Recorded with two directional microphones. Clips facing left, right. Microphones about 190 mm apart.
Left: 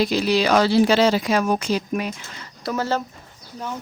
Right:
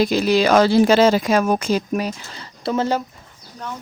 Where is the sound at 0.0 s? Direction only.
50° right (ahead or behind); by 2.9 s 25° right (ahead or behind).